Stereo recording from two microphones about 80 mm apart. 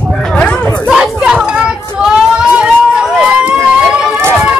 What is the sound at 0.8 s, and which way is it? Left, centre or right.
Chatter, centre.